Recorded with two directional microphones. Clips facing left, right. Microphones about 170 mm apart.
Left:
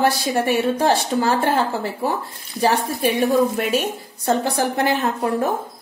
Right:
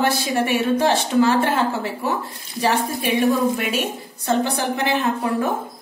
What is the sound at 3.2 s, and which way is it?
A woman's voice, 35° left (ahead or behind).